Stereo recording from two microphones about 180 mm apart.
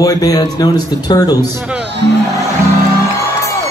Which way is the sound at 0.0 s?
20° left (ahead or behind).